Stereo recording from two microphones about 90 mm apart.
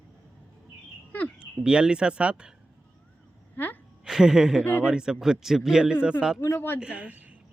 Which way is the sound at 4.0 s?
5° right (ahead or behind).